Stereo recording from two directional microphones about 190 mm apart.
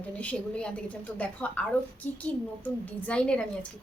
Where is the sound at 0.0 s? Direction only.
5° left (ahead or behind).